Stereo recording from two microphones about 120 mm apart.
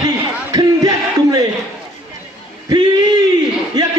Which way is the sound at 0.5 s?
35° right (ahead or behind).